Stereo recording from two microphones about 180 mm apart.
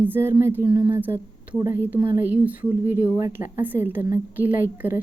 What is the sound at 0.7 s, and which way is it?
Speech, 50° left (ahead or behind).